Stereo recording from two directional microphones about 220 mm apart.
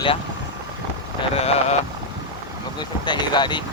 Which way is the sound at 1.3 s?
30° left (ahead or behind).